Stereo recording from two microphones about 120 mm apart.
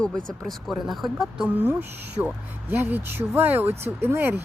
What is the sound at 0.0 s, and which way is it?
Speech, 5° left (ahead or behind).